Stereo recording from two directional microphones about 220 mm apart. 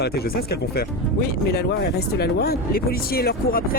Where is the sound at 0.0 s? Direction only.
45° left (ahead or behind).